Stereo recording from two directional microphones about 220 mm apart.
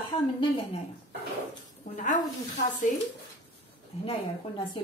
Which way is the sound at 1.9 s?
35° left (ahead or behind).